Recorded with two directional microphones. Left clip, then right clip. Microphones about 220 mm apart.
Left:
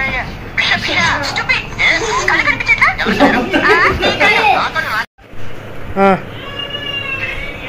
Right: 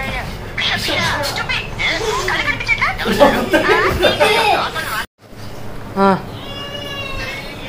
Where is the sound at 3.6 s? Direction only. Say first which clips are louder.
Left 5 dB; 30° left (ahead or behind).